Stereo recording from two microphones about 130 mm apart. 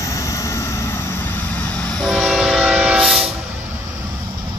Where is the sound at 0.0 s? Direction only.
25° left (ahead or behind); by 3.3 s centre (ahead or behind).